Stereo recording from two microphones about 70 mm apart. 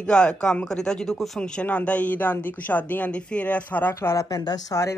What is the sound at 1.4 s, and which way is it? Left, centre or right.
Speech, centre.